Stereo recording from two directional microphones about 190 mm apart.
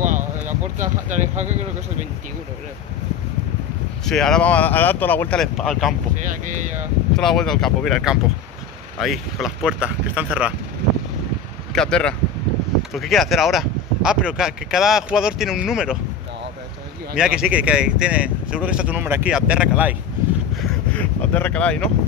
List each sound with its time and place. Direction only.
0.0 s a sound: 40° right (ahead or behind)
4.0 s speech: 5° left (ahead or behind)
7.2 s speech: centre (ahead or behind)
11.7 s speech: 5° left (ahead or behind)
17.2 s speech: 5° right (ahead or behind)
20.9 s speech: 10° left (ahead or behind)